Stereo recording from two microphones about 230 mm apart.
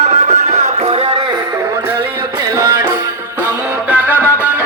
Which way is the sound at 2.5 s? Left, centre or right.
Centre.